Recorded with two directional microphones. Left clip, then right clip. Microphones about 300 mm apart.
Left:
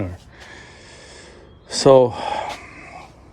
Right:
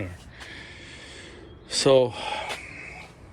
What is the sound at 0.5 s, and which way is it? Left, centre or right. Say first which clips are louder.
Gasp: even; centre.